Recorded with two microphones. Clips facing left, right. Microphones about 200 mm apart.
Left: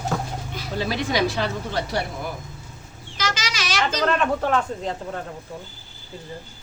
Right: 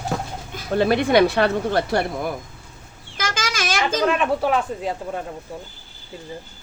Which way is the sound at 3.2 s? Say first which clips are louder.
Right 2 dB; 50° right (ahead or behind).